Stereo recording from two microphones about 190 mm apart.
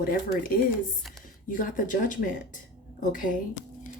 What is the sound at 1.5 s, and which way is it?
Speech, 45° left (ahead or behind).